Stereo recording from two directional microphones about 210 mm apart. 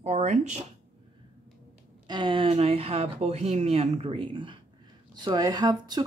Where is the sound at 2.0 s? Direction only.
20° right (ahead or behind).